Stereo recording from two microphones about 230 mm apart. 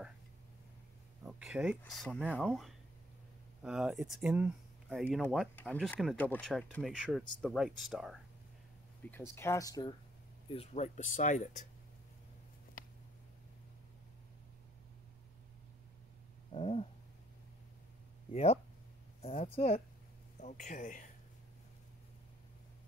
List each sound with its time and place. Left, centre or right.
1.2 s a sound: centre
1.8 s speech: centre
9.0 s speech: centre
10.5 s speech: left
16.5 s cat: left
18.3 s speech: left